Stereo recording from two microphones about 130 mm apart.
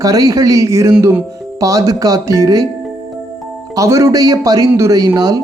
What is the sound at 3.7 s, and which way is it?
Speech, 25° right (ahead or behind).